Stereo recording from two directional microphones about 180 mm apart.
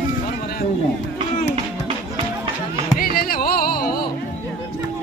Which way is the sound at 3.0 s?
55° left (ahead or behind).